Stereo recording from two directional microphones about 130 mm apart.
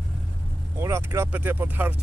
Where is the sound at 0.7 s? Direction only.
20° right (ahead or behind).